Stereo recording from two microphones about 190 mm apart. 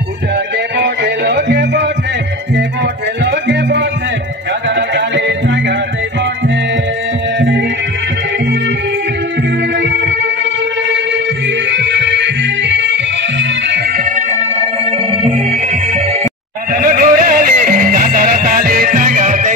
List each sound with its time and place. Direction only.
0.7 s music: 65° right (ahead or behind)
3.3 s music: 65° right (ahead or behind)
7.3 s music: 65° right (ahead or behind)
9.8 s music: 70° right (ahead or behind)
11.7 s music: 70° right (ahead or behind)
14.1 s music: 35° right (ahead or behind)
16.7 s music: 50° right (ahead or behind)